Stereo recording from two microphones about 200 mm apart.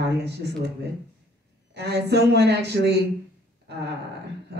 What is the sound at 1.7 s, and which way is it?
Speech, 55° right (ahead or behind).